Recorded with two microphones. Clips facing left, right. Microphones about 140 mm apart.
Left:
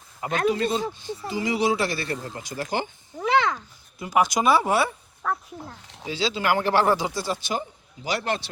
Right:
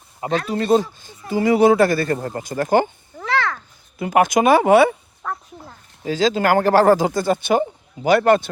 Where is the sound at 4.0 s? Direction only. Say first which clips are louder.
Right 6 dB; 55° right (ahead or behind).